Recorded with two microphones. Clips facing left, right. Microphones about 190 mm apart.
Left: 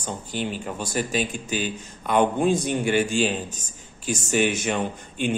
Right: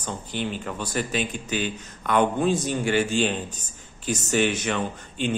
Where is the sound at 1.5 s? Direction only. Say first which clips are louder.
Even; 10° left (ahead or behind).